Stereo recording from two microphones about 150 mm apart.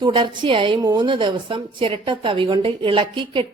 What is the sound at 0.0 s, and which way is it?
Speech, 35° right (ahead or behind).